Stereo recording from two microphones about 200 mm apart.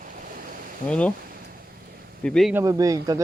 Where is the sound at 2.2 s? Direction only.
Centre (ahead or behind).